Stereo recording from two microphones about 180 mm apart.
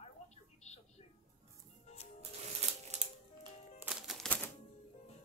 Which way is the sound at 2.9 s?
40° right (ahead or behind).